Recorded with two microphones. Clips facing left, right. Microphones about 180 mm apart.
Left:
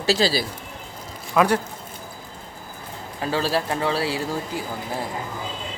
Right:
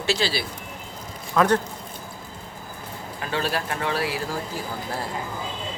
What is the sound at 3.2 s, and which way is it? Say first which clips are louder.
Speech: left 4 dB; 30° left (ahead or behind).